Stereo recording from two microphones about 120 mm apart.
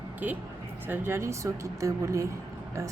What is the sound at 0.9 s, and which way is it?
Speech, 20° right (ahead or behind).